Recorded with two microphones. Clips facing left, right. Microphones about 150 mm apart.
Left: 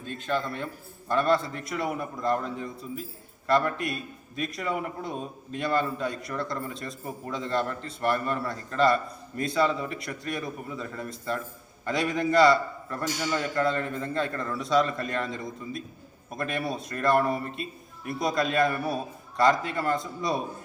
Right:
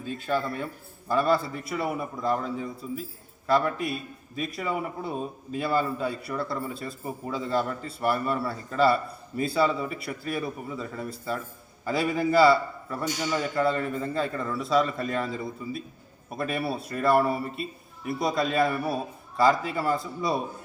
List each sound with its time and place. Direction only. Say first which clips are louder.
0.0 s a man's voice: right 2 dB; 10° right (ahead or behind)